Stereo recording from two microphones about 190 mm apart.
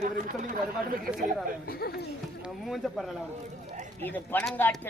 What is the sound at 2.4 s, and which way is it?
A man's voice, centre (ahead or behind).